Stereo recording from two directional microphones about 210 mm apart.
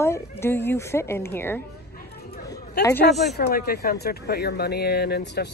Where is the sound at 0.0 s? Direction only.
10° left (ahead or behind).